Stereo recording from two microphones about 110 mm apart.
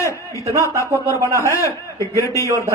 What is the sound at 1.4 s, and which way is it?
A man's voice, 25° left (ahead or behind).